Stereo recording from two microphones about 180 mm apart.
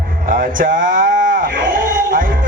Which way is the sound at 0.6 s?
50° right (ahead or behind).